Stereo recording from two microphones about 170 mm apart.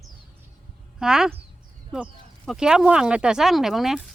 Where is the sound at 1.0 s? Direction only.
5° right (ahead or behind).